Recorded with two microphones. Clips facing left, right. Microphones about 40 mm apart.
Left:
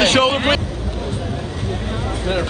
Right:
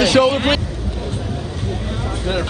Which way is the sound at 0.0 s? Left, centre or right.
Left.